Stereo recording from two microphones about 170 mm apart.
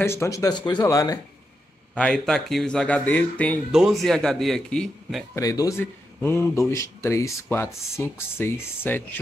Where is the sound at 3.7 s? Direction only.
5° right (ahead or behind).